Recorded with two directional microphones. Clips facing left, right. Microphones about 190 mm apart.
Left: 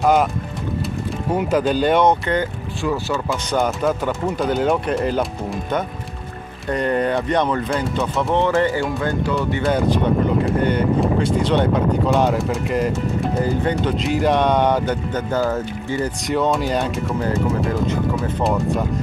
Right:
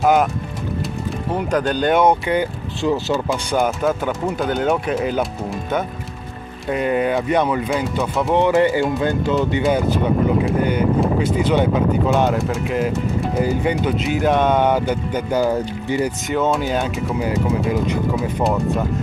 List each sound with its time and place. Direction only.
0.0 s speech: centre (ahead or behind)
1.3 s speech: 5° left (ahead or behind)
2.8 s speech: 20° right (ahead or behind)
3.3 s speech: centre (ahead or behind)
8.4 s speech: 15° right (ahead or behind)
10.4 s speech: 5° right (ahead or behind)
16.3 s speech: centre (ahead or behind)
18.4 s speech: centre (ahead or behind)